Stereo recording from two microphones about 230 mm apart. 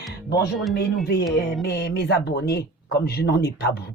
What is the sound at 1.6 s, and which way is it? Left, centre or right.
Speech, left.